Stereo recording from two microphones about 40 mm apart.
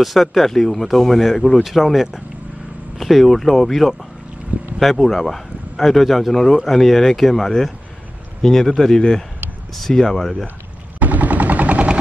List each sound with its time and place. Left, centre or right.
0.0 s a man's voice: centre
1.8 s a man's voice: centre
11.0 s gunshot: right